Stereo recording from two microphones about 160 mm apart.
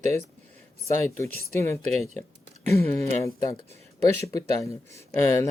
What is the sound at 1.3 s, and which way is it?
Speech, 70° left (ahead or behind).